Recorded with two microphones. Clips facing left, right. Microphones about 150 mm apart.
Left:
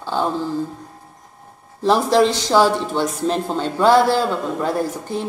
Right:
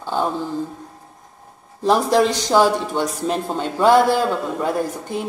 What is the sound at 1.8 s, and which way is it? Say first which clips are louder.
Speech: left 1 dB; 15° right (ahead or behind).